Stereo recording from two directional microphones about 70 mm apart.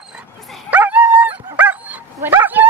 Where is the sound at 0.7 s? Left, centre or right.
Right.